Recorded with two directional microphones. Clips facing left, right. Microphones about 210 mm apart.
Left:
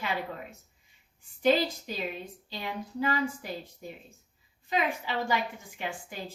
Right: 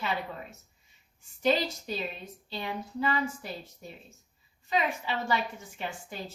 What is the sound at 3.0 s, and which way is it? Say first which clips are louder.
A woman's voice: left 1 dB; 15° left (ahead or behind).